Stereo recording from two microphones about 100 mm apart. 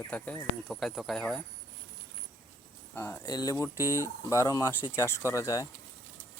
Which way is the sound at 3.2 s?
45° left (ahead or behind).